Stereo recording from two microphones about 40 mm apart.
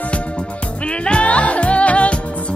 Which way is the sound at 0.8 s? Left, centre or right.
Left.